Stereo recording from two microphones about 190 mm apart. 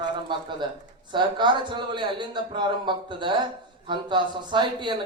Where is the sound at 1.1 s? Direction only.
25° right (ahead or behind).